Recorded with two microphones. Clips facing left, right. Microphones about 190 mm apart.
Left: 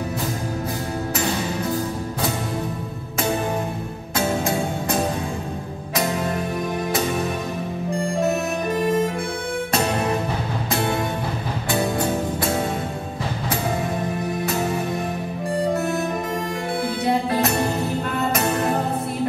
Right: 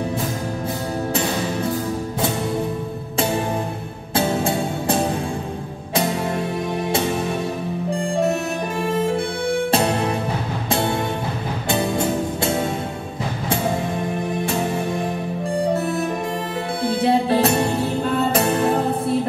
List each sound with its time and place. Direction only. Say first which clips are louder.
4.1 s music: right 2 dB; 30° right (ahead or behind)
11.7 s music: right 1 dB; 25° right (ahead or behind)
15.7 s music: right 1 dB; 30° right (ahead or behind)